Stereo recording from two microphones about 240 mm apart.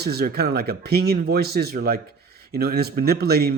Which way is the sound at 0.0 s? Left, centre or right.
Right.